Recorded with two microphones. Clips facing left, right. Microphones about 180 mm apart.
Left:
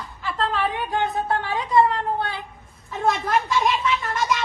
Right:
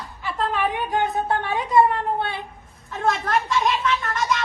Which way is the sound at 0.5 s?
15° right (ahead or behind).